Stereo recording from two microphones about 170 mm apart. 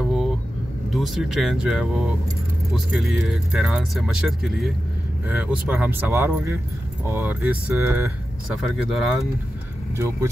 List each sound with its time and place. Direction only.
0.0 s vehicle: centre (ahead or behind)
0.9 s speech: centre (ahead or behind)
8.6 s speech: centre (ahead or behind)
9.9 s speech: 15° right (ahead or behind)